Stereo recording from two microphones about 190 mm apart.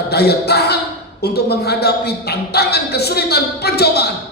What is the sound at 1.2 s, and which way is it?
A woman's voice, 55° left (ahead or behind).